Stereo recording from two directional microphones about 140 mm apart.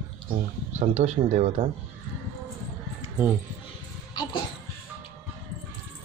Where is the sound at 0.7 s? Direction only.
55° right (ahead or behind).